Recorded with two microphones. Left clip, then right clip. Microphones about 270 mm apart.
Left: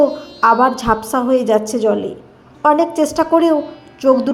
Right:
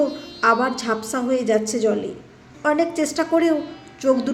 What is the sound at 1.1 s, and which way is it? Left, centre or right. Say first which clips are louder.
A woman's voice: left 5 dB; centre.